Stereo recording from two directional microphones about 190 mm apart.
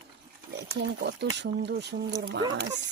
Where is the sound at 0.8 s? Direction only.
65° right (ahead or behind).